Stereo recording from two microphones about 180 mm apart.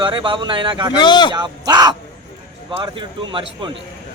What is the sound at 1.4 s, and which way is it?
Speech, 25° right (ahead or behind).